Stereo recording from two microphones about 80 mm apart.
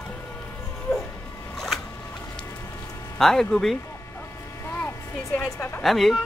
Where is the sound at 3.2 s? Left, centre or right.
Centre.